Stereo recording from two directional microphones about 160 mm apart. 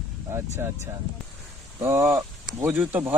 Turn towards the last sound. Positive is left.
turn(degrees=-10)  # may be behind; listen again after turning